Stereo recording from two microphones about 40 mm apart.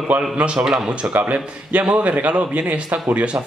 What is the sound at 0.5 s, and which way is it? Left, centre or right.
Speech, centre.